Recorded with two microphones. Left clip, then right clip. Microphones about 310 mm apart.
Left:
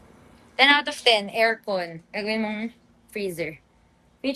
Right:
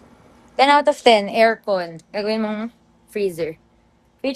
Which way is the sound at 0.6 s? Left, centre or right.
Centre.